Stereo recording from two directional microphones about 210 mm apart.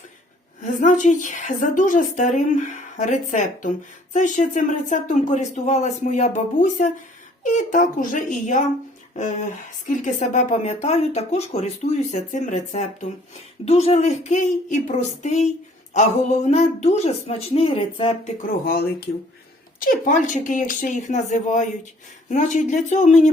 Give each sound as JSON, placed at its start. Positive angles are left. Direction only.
{"t": 0.6, "sound": "a woman's voice", "side_deg": 35}
{"t": 18.4, "sound": "a woman's voice", "side_deg": 45}